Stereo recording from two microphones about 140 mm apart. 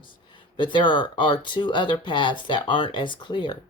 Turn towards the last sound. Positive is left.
turn(degrees=35)  # may be behind; listen again after turning